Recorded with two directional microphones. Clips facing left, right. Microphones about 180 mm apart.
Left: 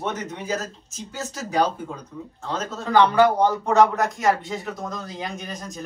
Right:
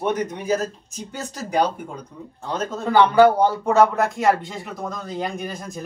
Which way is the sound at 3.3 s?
Centre (ahead or behind).